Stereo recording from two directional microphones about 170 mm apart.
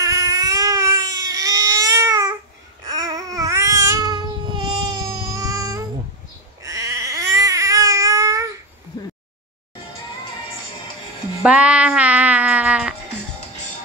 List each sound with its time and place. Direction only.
0.0 s baby cry: 20° right (ahead or behind)
2.8 s babbling: 20° right (ahead or behind)
6.6 s baby cry: 20° right (ahead or behind)
11.4 s music: 5° right (ahead or behind)